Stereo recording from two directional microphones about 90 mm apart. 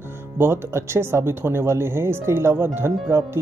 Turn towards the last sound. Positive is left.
turn(degrees=-25)  # may be behind; listen again after turning